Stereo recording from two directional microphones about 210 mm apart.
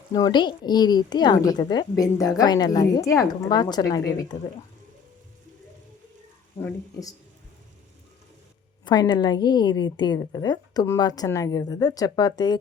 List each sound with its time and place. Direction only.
0.1 s a woman's voice: 20° left (ahead or behind)
6.6 s speech: 10° left (ahead or behind)
8.8 s a woman's voice: 20° left (ahead or behind)